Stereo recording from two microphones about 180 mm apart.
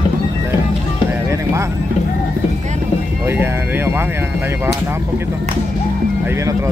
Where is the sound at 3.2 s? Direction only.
15° right (ahead or behind).